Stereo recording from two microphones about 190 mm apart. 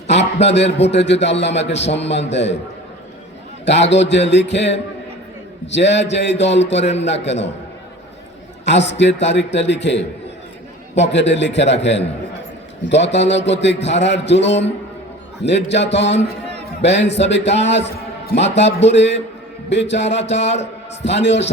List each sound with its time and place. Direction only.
0.1 s a man's voice: 65° left (ahead or behind)
3.7 s a man's voice: 65° left (ahead or behind)
8.6 s a man's voice: 70° left (ahead or behind)
20.3 s a man's voice: 35° left (ahead or behind)
21.0 s a man's voice: 65° left (ahead or behind)